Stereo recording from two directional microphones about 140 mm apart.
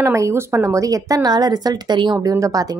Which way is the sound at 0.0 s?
20° right (ahead or behind).